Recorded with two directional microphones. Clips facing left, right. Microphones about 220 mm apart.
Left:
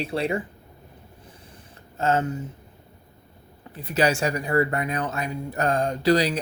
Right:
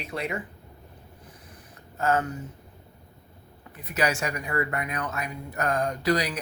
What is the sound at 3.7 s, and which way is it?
Speech, 30° left (ahead or behind).